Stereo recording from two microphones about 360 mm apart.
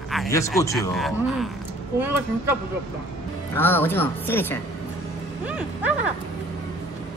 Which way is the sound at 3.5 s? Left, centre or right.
Centre.